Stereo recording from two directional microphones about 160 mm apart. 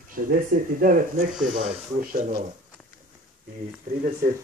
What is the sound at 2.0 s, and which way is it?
Speech, 55° right (ahead or behind).